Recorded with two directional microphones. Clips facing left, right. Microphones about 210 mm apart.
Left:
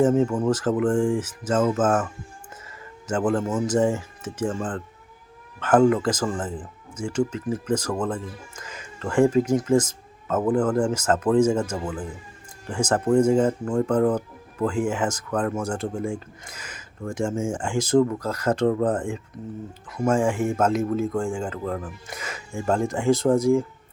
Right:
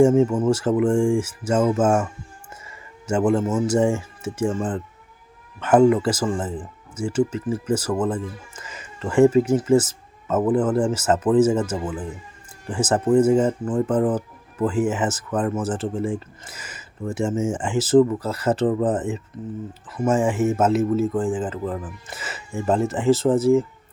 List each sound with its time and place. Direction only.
0.0 s speech: 5° right (ahead or behind)